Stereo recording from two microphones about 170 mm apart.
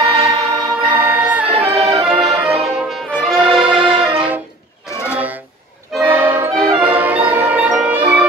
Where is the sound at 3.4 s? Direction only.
30° right (ahead or behind).